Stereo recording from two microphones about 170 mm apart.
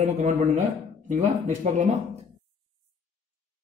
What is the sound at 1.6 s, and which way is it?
Speech, 45° right (ahead or behind).